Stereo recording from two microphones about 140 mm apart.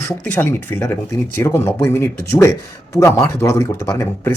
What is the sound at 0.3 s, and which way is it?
Speech, 15° left (ahead or behind).